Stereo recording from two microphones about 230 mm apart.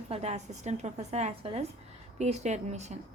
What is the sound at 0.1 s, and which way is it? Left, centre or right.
A woman's voice, right.